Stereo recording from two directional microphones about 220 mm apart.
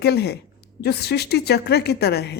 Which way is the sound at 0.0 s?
45° left (ahead or behind).